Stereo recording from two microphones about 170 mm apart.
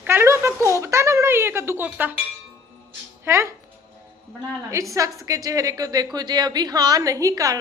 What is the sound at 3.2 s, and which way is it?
Speech, 15° right (ahead or behind).